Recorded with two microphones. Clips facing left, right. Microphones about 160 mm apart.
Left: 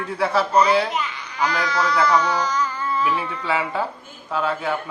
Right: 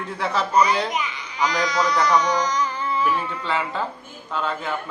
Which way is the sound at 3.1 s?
10° left (ahead or behind).